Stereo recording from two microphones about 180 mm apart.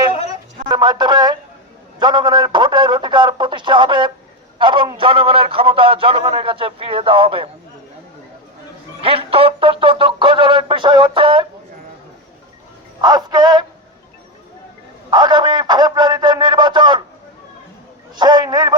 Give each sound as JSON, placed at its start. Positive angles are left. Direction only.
{"t": 0.7, "sound": "a man's voice", "side_deg": -25}
{"t": 9.0, "sound": "a man's voice", "side_deg": -30}
{"t": 13.0, "sound": "a man's voice", "side_deg": -25}
{"t": 15.1, "sound": "speech", "side_deg": -25}
{"t": 18.2, "sound": "a man's voice", "side_deg": -25}